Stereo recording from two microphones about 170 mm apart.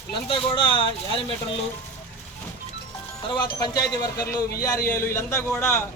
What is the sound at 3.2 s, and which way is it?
A man's voice, 25° left (ahead or behind).